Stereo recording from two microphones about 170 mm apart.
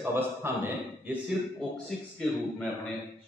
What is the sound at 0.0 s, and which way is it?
A man's voice, 15° right (ahead or behind).